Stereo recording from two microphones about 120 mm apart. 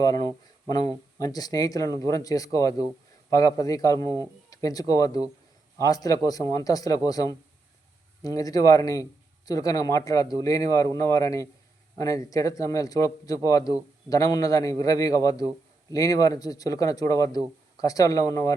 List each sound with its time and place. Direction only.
0.0 s speech: 30° left (ahead or behind)